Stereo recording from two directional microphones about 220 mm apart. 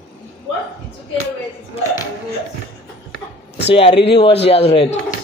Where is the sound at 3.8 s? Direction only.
25° left (ahead or behind).